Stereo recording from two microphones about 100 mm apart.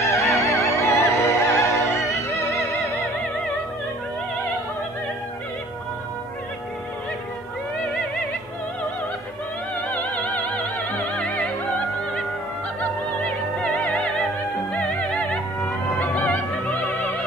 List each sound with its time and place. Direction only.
0.1 s music: 25° left (ahead or behind)
9.8 s music: 10° left (ahead or behind)
11.1 s opera: 5° left (ahead or behind)
13.7 s music: centre (ahead or behind)